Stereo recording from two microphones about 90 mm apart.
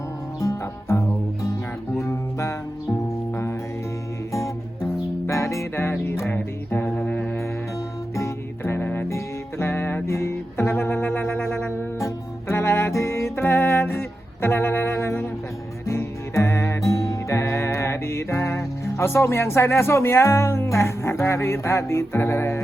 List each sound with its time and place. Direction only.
0.3 s music: 35° left (ahead or behind); by 7.3 s 15° left (ahead or behind)
8.1 s music: 30° left (ahead or behind)